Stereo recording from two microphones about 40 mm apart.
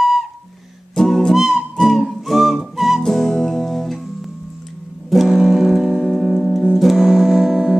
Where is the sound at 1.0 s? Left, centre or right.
Centre.